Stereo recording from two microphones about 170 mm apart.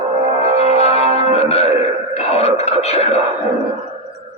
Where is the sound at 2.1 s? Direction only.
40° left (ahead or behind).